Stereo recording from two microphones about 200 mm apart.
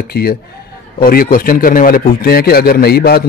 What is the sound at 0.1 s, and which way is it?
A man's voice, 50° left (ahead or behind).